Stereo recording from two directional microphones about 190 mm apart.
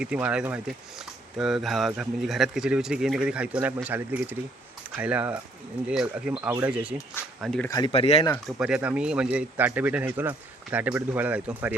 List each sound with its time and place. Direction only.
0.0 s speech: 5° right (ahead or behind)
7.7 s speech: 20° left (ahead or behind)
7.9 s speech: 30° left (ahead or behind)
8.4 s speech: 5° right (ahead or behind)